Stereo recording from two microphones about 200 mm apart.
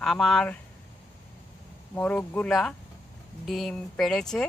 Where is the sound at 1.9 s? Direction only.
5° left (ahead or behind).